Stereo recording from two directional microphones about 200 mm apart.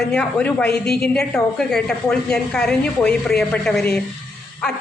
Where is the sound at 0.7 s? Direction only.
50° left (ahead or behind).